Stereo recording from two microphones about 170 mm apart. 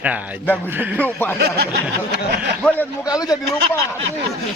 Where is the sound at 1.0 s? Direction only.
10° left (ahead or behind).